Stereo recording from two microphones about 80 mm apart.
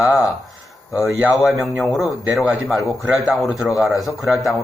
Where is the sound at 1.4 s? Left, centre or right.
Centre.